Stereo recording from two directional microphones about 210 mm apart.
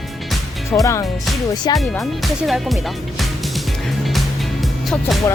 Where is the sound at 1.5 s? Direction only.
20° left (ahead or behind).